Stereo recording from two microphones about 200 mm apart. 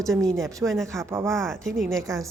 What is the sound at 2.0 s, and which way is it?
Speech, 15° right (ahead or behind).